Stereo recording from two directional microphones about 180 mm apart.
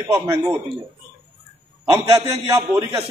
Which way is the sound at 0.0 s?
20° right (ahead or behind).